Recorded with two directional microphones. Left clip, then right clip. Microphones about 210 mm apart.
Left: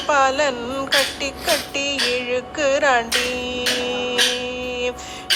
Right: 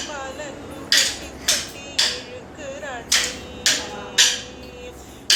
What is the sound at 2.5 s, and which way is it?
Music, 55° left (ahead or behind).